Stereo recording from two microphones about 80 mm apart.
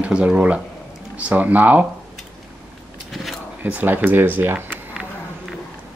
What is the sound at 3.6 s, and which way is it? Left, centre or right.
Speech, right.